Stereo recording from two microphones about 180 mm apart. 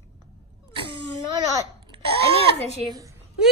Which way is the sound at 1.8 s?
30° right (ahead or behind).